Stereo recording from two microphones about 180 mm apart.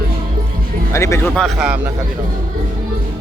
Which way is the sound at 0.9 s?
15° left (ahead or behind).